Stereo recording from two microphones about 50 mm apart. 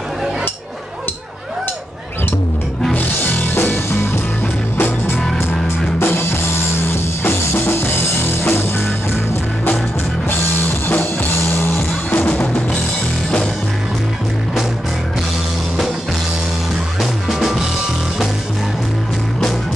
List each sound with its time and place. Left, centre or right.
3.3 s music: left
12.1 s music: left
17.0 s music: centre